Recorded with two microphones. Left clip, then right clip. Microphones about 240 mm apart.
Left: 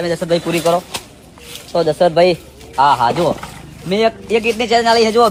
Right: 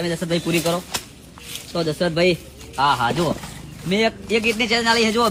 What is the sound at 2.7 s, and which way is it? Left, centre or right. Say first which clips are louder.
Speech: left 6 dB; left.